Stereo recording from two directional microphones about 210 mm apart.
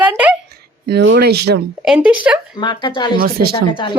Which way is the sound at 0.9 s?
55° right (ahead or behind).